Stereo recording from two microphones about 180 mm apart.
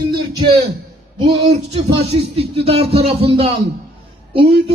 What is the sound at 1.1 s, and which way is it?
A man's voice, 25° right (ahead or behind).